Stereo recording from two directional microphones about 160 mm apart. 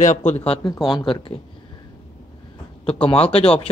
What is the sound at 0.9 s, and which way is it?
Speech, 30° left (ahead or behind).